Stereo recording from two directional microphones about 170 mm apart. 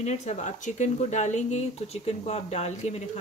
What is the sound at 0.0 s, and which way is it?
Speech, 40° left (ahead or behind).